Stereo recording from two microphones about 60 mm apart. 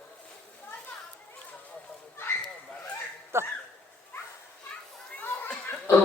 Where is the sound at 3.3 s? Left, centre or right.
Right.